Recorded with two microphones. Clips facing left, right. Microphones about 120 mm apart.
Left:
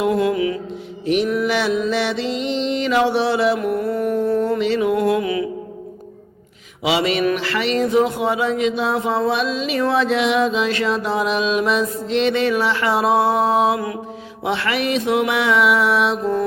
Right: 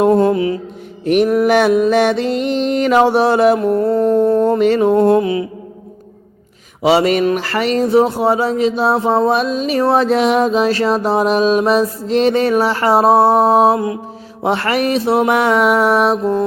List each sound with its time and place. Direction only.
0.0 s speech: 40° right (ahead or behind)
1.0 s music: 55° right (ahead or behind)
3.6 s speech: 35° right (ahead or behind)
4.9 s speech: 35° right (ahead or behind)
6.8 s music: 40° right (ahead or behind)
7.3 s speech: 40° right (ahead or behind)
14.4 s music: 40° right (ahead or behind)